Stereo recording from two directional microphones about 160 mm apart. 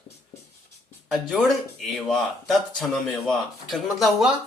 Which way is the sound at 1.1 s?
Centre (ahead or behind).